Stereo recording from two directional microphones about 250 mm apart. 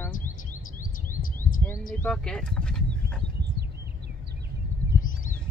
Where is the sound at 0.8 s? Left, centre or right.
Left.